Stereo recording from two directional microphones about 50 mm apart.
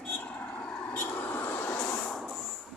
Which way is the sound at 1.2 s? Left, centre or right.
Left.